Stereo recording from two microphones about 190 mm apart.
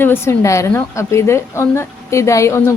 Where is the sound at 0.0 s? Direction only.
10° left (ahead or behind).